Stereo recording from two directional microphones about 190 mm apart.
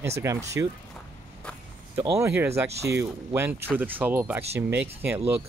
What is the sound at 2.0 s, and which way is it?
Speech, 15° right (ahead or behind).